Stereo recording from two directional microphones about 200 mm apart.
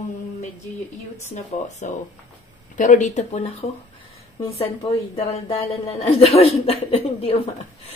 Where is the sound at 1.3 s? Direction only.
35° left (ahead or behind).